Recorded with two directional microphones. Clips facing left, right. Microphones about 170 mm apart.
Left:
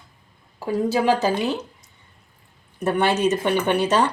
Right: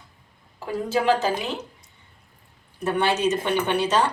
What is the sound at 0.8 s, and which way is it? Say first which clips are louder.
Speech: left 1 dB; 40° left (ahead or behind).